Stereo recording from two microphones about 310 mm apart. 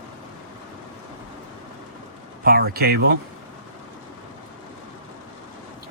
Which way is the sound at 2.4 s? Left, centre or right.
Right.